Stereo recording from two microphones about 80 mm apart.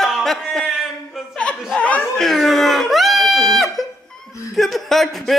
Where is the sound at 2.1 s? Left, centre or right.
Centre.